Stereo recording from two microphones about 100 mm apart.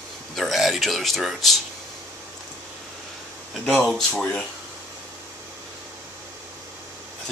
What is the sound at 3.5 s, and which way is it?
Speech, centre (ahead or behind).